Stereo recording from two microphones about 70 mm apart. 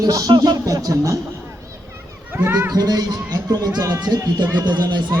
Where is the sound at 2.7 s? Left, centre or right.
Right.